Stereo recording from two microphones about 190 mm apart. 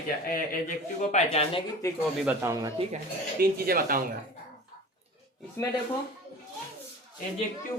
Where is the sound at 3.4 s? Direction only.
50° right (ahead or behind).